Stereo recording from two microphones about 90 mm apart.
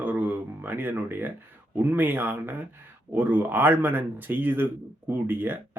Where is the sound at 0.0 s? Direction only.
20° right (ahead or behind).